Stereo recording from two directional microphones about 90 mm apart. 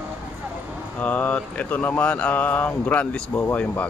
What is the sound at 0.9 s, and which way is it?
Mantra, 20° left (ahead or behind).